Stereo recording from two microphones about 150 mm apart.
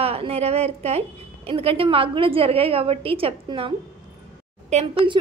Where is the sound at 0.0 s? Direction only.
40° right (ahead or behind).